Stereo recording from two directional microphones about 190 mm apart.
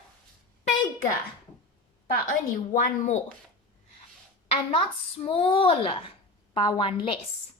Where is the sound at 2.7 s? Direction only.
40° left (ahead or behind).